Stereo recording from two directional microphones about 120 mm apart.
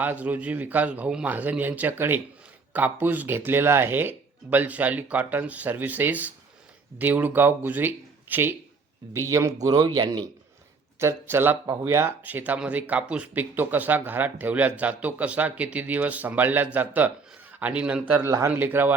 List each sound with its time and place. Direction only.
0.0 s speech: 15° right (ahead or behind)
9.6 s speech: 35° right (ahead or behind)
11.0 s speech: 20° right (ahead or behind)
18.3 s speech: 25° right (ahead or behind)